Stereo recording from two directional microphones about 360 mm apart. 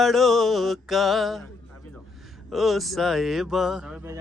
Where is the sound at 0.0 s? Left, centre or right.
Centre.